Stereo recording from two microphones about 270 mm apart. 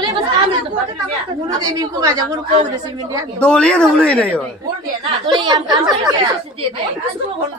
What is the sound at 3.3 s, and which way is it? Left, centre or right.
Speech, centre.